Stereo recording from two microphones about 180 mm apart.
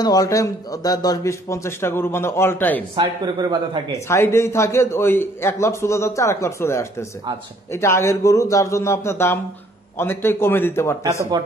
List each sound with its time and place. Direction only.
0.0 s a man's voice: 20° left (ahead or behind)
3.0 s a man's voice: 20° right (ahead or behind)
4.1 s a man's voice: 15° left (ahead or behind)